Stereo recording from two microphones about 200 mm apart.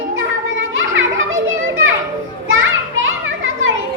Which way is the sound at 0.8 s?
80° right.